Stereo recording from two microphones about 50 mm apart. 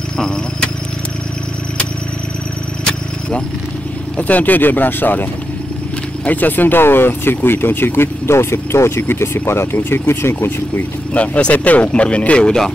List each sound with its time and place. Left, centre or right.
2.8 s vehicle: centre
4.2 s speech: left
11.1 s speech: left